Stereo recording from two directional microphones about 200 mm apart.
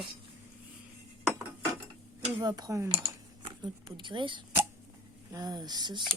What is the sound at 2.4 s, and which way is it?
Speech, 20° right (ahead or behind).